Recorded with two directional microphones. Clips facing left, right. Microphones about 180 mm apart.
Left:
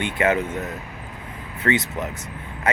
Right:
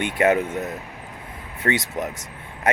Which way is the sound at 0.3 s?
10° right (ahead or behind).